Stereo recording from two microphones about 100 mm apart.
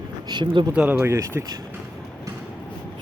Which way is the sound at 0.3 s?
50° right (ahead or behind).